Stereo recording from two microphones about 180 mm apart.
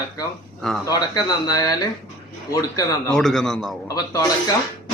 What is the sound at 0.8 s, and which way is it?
Speech, 20° left (ahead or behind).